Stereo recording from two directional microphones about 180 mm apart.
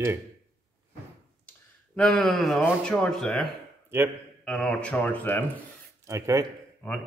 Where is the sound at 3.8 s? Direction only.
10° right (ahead or behind).